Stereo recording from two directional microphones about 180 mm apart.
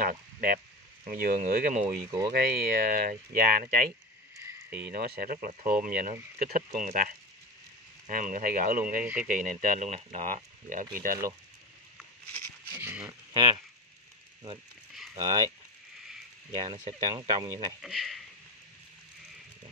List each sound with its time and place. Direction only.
0.0 s a sound: 50° right (ahead or behind)
1.0 s speech: 55° right (ahead or behind)
2.0 s speech: 15° right (ahead or behind)
2.3 s speech: 60° right (ahead or behind)
4.4 s cricket: 15° right (ahead or behind)
4.7 s speech: 65° right (ahead or behind)
9.0 s speech: 5° right (ahead or behind)
9.3 s speech: 45° right (ahead or behind)
12.7 s a sound: 10° right (ahead or behind)
13.3 s speech: 25° right (ahead or behind)
15.1 s speech: 20° right (ahead or behind)
16.5 s speech: 40° right (ahead or behind)
17.1 s speech: 20° right (ahead or behind)
17.8 s speech: centre (ahead or behind)